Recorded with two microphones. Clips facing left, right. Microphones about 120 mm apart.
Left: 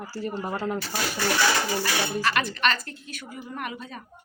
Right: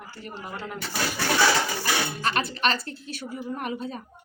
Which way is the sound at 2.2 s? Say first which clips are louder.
Left 2 dB; 35° right (ahead or behind).